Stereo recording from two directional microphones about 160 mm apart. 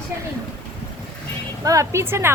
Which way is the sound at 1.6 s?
20° right (ahead or behind).